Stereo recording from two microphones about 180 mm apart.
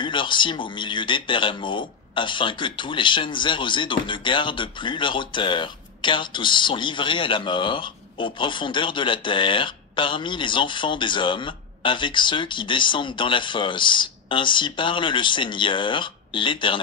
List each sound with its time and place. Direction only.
0.0 s speech: 25° left (ahead or behind)